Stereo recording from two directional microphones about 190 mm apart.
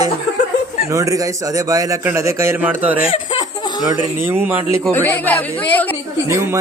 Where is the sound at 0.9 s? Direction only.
15° right (ahead or behind).